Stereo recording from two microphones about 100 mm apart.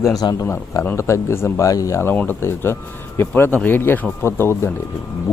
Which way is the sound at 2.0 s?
20° left (ahead or behind).